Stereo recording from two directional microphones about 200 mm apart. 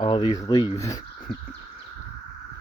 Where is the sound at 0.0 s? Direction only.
25° left (ahead or behind).